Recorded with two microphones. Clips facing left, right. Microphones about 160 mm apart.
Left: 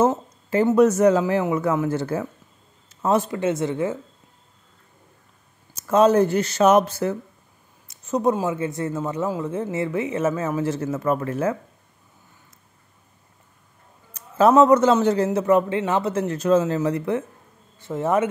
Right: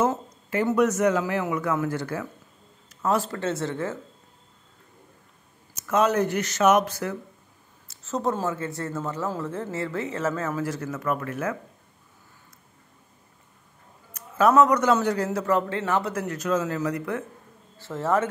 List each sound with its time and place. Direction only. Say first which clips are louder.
0.0 s a man's voice: left 4 dB; 30° left (ahead or behind)
5.8 s a man's voice: left 6 dB; 30° left (ahead or behind)
7.9 s a man's voice: left 6 dB; 15° left (ahead or behind)
14.1 s a man's voice: left 3 dB; 30° left (ahead or behind)